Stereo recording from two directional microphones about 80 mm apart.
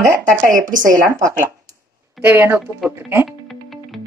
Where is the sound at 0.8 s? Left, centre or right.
Right.